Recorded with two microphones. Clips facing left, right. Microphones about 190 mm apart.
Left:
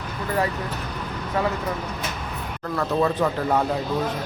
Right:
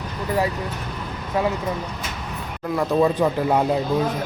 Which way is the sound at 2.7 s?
15° right (ahead or behind).